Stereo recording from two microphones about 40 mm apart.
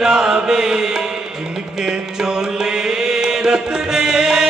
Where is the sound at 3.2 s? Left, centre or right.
Centre.